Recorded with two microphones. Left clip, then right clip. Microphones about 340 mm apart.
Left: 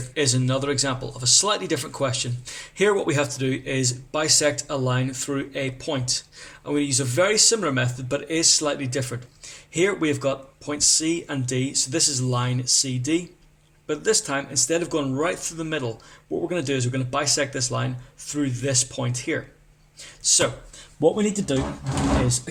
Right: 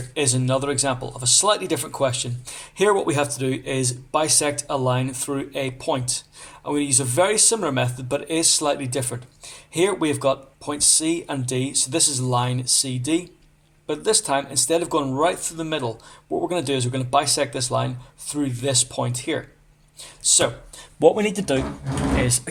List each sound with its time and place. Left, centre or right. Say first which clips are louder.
0.1 s speech: right 1 dB; centre
21.2 s speech: right 2 dB; right